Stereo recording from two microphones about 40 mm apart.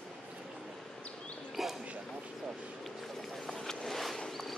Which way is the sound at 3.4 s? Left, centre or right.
Centre.